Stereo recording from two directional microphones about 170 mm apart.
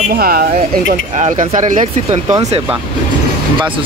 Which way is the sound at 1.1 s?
45° right (ahead or behind).